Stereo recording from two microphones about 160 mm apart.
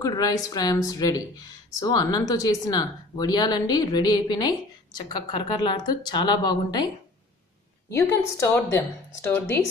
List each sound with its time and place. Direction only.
0.0 s speech: 25° left (ahead or behind)
7.9 s a woman's voice: 20° left (ahead or behind)